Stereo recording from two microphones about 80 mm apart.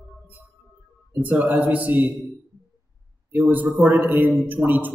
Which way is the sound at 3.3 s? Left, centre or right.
Right.